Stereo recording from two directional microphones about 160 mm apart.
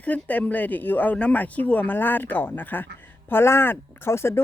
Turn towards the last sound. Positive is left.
turn(degrees=15)  # may be behind; listen again after turning